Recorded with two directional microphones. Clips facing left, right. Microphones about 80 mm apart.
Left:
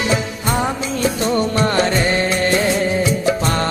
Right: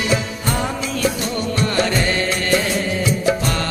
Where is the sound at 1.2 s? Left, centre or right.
Left.